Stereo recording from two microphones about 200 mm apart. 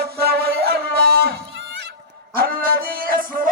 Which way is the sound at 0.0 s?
50° right (ahead or behind).